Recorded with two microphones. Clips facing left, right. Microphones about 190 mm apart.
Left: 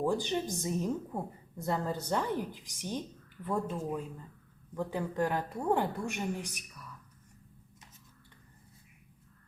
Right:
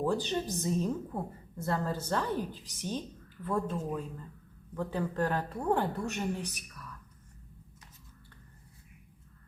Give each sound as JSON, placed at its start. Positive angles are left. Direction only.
{"t": 0.0, "sound": "a woman's voice", "side_deg": 15}